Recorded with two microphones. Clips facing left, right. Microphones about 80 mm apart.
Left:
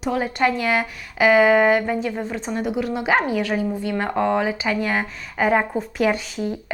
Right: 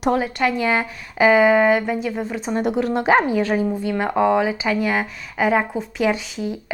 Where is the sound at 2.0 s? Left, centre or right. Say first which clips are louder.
Right 1 dB; centre.